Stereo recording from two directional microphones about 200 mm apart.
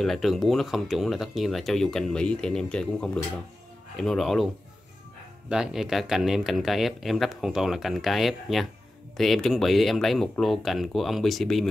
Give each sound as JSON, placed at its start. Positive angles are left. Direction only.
{"t": 0.0, "sound": "speech", "side_deg": 0}
{"t": 5.5, "sound": "speech", "side_deg": -5}